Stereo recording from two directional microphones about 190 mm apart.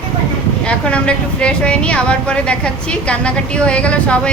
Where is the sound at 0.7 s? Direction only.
5° left (ahead or behind).